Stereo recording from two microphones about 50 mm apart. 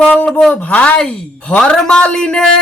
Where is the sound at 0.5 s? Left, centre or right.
Left.